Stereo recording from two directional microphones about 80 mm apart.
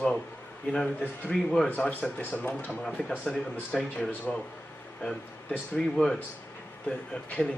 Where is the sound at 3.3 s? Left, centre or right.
Centre.